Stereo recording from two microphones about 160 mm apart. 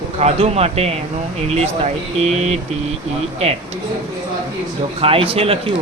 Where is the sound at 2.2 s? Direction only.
40° right (ahead or behind).